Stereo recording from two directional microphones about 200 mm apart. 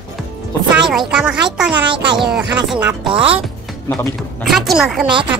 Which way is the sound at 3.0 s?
25° right (ahead or behind).